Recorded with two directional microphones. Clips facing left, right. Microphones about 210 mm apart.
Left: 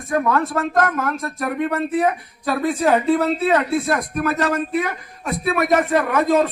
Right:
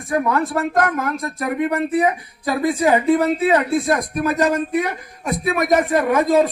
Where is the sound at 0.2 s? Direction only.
15° right (ahead or behind).